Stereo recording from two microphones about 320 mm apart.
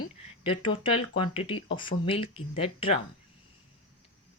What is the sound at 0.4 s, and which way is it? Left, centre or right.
Speech, centre.